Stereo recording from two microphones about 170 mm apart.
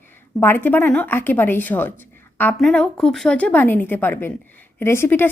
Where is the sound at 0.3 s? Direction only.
10° left (ahead or behind).